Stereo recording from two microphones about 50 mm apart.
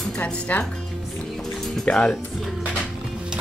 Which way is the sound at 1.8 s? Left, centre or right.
Centre.